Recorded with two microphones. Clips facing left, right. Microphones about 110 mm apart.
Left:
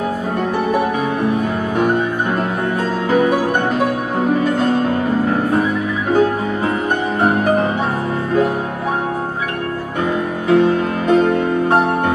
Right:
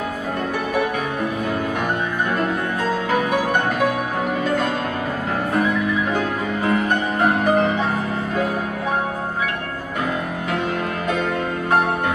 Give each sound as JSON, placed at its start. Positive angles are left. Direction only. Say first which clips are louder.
{"t": 3.1, "sound": "music", "louder": "left 7 dB", "side_deg": 40}
{"t": 6.6, "sound": "music", "louder": "right 1 dB", "side_deg": 20}
{"t": 10.5, "sound": "music", "louder": "left 11 dB", "side_deg": 40}